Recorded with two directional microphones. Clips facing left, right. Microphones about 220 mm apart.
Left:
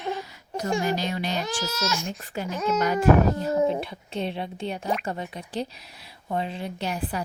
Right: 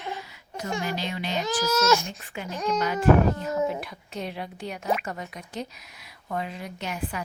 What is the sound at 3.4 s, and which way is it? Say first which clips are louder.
Speech: left 4 dB; 35° left (ahead or behind).